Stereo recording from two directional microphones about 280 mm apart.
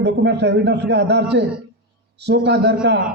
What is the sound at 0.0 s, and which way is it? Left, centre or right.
A man's voice, right.